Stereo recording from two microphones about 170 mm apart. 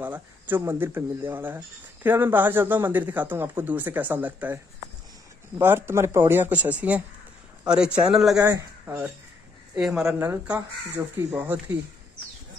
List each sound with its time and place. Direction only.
0.0 s speech: 10° right (ahead or behind)
5.6 s speech: 15° right (ahead or behind)
8.4 s speech: 20° right (ahead or behind)